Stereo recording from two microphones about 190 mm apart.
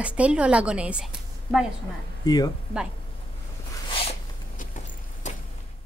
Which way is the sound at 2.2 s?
20° left (ahead or behind).